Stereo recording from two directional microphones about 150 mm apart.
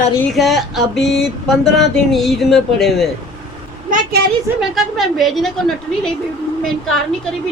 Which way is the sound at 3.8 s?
65° right (ahead or behind).